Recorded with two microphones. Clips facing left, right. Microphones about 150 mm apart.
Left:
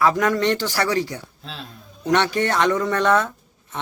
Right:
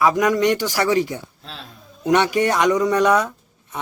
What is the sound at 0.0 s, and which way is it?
A man's voice, 15° right (ahead or behind).